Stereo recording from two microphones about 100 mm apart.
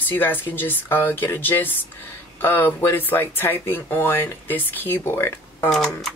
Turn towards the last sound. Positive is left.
turn(degrees=5)  # may be behind; listen again after turning